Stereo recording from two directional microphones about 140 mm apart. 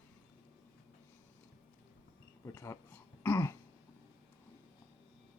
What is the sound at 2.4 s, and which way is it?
Throat clearing, 20° left (ahead or behind).